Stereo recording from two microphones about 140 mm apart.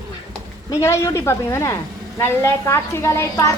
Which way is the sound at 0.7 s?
20° left (ahead or behind).